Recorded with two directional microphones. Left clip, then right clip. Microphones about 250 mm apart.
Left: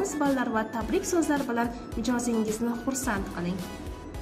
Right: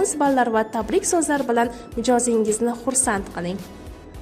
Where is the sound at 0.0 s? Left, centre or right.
Right.